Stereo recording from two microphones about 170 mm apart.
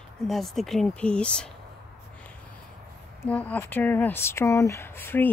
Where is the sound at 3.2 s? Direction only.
10° left (ahead or behind).